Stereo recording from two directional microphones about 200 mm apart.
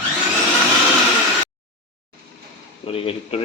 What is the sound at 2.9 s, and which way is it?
Speech, 30° left (ahead or behind).